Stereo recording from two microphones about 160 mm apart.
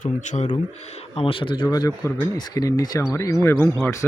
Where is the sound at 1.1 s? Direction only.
35° left (ahead or behind).